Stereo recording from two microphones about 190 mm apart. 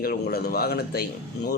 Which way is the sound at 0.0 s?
55° left (ahead or behind).